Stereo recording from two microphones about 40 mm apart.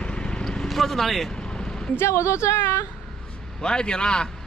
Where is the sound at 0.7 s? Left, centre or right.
Centre.